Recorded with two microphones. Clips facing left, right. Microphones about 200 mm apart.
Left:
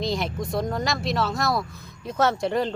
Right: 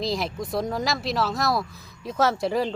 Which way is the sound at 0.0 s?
Centre (ahead or behind).